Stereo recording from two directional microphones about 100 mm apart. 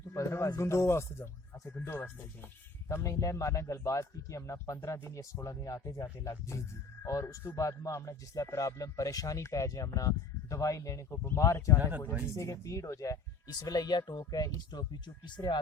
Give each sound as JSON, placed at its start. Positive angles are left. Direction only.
{"t": 0.1, "sound": "speech", "side_deg": 25}
{"t": 11.8, "sound": "speech", "side_deg": -20}
{"t": 12.2, "sound": "speech", "side_deg": 30}